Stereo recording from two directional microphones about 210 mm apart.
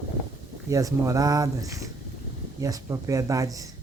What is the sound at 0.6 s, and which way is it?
Speech, 15° right (ahead or behind).